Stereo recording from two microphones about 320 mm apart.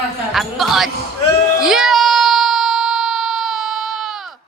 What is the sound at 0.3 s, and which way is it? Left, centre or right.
Speech, centre.